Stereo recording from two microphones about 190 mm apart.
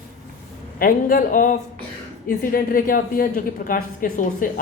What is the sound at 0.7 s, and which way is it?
A woman's voice, 50° left (ahead or behind).